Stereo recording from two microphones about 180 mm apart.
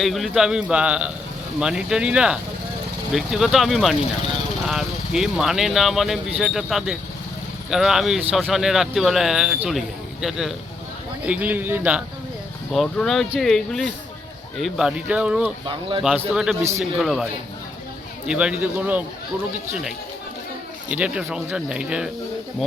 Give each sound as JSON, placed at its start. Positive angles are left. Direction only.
{"t": 0.0, "sound": "speech", "side_deg": 0}
{"t": 15.6, "sound": "speech", "side_deg": -30}
{"t": 16.3, "sound": "speech", "side_deg": -5}
{"t": 18.3, "sound": "speech", "side_deg": -5}
{"t": 20.9, "sound": "speech", "side_deg": -5}